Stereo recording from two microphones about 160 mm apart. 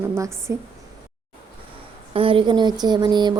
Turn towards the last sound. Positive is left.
turn(degrees=-30)  # may be behind; listen again after turning